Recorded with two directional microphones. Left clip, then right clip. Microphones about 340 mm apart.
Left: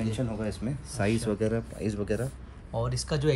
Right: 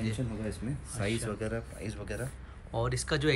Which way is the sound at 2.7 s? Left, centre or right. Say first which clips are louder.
Even; centre.